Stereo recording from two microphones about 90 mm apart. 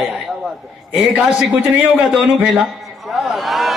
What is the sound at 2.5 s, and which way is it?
A man's voice, 5° right (ahead or behind).